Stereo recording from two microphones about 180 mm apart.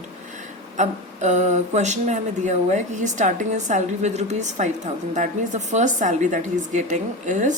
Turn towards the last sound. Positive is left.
turn(degrees=-45)  # may be behind; listen again after turning